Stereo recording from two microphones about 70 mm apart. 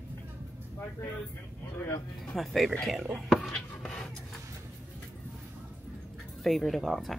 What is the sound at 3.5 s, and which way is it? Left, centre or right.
Writing, centre.